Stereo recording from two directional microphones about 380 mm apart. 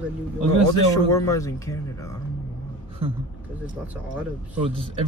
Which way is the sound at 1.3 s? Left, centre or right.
Centre.